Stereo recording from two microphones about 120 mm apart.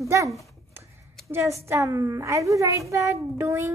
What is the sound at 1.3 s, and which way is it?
A woman's voice, 25° right (ahead or behind).